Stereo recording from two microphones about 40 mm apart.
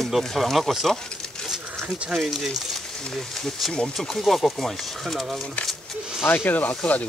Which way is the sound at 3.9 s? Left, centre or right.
Centre.